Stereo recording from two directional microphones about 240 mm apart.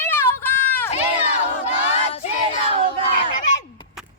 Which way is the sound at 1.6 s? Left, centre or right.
Left.